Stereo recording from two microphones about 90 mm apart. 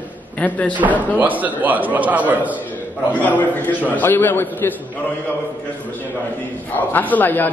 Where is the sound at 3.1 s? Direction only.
20° left (ahead or behind).